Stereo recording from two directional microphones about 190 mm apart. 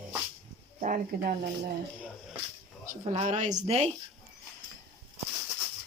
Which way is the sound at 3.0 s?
35° right (ahead or behind).